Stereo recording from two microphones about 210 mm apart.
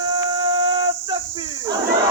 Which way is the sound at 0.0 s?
20° right (ahead or behind).